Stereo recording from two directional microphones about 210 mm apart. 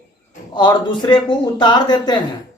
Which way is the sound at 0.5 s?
20° left (ahead or behind).